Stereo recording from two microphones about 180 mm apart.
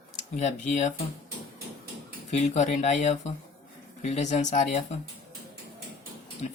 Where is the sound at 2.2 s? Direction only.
40° left (ahead or behind).